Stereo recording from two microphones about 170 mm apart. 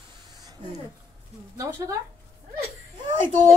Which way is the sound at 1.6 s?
20° right (ahead or behind).